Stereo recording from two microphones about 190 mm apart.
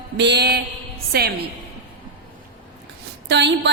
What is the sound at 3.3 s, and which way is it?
Speech, 65° right (ahead or behind).